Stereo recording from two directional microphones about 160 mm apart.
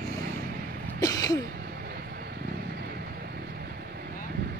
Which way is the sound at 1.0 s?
20° left (ahead or behind).